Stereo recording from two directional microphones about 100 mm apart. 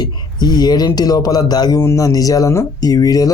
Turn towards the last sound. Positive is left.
turn(degrees=40)  # may be behind; listen again after turning